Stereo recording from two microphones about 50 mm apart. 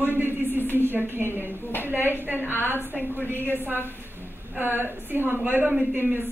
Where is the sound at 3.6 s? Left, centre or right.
Right.